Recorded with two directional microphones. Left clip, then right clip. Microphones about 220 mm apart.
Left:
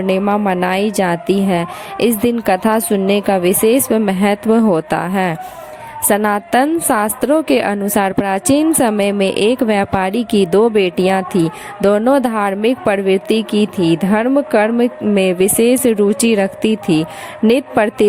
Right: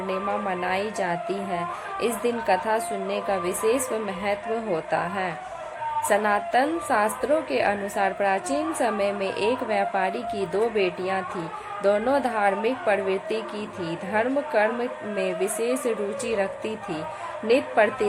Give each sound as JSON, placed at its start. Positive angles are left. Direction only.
{"t": 0.1, "sound": "speech", "side_deg": 45}